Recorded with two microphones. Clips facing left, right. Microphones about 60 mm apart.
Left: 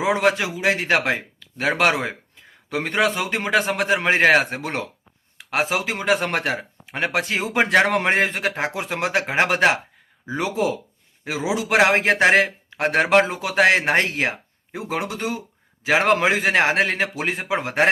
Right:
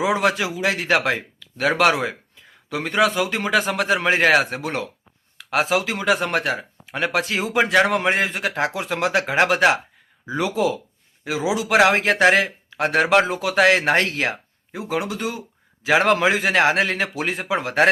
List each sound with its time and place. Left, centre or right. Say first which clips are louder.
0.0 s a man's voice: even; left
8.5 s a man's voice: right 2 dB; left
14.7 s a man's voice: right 1 dB; left